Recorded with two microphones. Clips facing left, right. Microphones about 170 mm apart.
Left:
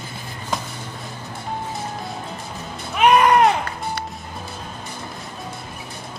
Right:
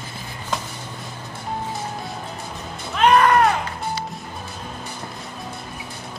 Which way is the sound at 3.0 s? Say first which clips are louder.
Left 1 dB; 15° left (ahead or behind).